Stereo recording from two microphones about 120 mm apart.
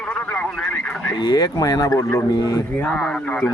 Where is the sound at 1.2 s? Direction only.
35° left (ahead or behind).